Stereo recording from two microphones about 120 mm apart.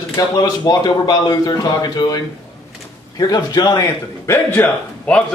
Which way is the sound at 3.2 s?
35° left (ahead or behind).